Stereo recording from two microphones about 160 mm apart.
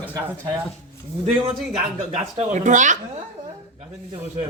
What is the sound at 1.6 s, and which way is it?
Speech, 5° right (ahead or behind).